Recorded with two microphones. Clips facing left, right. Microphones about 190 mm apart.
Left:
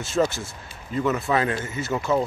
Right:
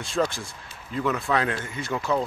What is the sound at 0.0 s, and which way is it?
A man's voice, 5° left (ahead or behind).